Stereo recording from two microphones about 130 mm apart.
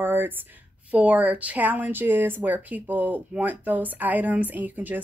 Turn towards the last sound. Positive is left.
turn(degrees=-15)  # may be behind; listen again after turning